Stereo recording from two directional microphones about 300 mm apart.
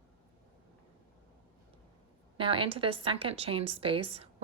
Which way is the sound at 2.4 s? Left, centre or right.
Centre.